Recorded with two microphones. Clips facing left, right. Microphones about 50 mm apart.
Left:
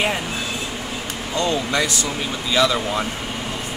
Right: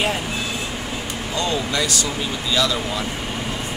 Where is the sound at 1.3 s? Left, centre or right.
Left.